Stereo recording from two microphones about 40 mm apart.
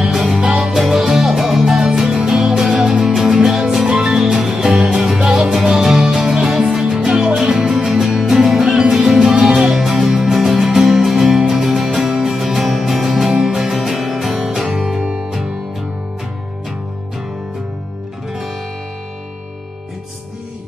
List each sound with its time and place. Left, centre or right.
0.3 s music: right
0.7 s music: centre
10.2 s music: centre
11.9 s music: centre
12.4 s music: centre